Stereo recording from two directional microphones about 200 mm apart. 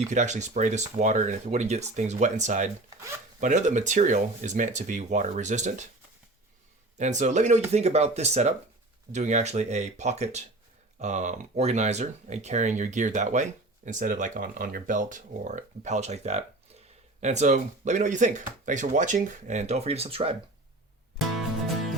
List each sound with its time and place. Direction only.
0.1 s speech: 35° right (ahead or behind)
7.0 s speech: 35° right (ahead or behind)